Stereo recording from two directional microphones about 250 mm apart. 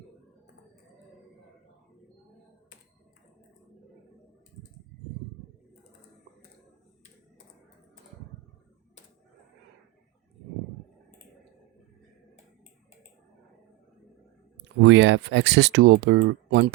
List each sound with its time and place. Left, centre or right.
14.8 s speech: right